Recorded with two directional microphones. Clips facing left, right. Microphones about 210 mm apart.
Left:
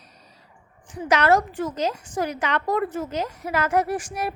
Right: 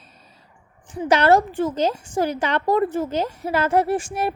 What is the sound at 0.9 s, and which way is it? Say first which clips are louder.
A woman's voice: right 3 dB; 30° right (ahead or behind).